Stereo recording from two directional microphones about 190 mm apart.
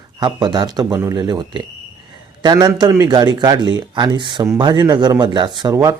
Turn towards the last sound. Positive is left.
turn(degrees=-20)  # may be behind; listen again after turning